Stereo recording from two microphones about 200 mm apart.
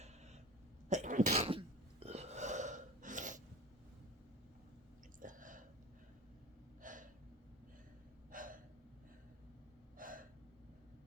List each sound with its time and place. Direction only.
0.9 s cough: 40° right (ahead or behind)
2.0 s burping: 30° right (ahead or behind)
5.2 s a sound: 40° right (ahead or behind)
6.8 s gasp: 40° right (ahead or behind)
8.3 s gasp: 45° right (ahead or behind)
10.0 s gasp: 45° right (ahead or behind)